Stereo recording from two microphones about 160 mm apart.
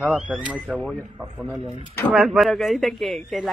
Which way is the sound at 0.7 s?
5° left (ahead or behind).